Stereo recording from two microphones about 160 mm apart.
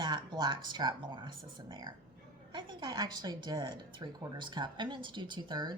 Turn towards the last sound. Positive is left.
turn(degrees=-30)  # may be behind; listen again after turning